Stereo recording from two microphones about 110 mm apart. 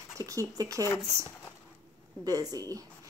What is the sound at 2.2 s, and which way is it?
Speech, 35° right (ahead or behind).